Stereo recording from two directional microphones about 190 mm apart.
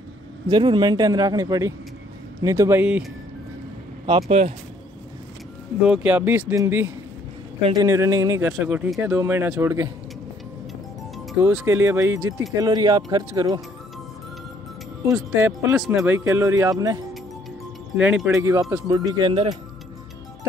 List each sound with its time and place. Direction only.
0.5 s a man's voice: 25° right (ahead or behind)
4.0 s a man's voice: 25° right (ahead or behind)
5.8 s speech: 5° right (ahead or behind)
11.5 s a man's voice: 10° right (ahead or behind)
15.1 s speech: 10° right (ahead or behind)
17.9 s speech: 5° right (ahead or behind); by 19.5 s 25° right (ahead or behind)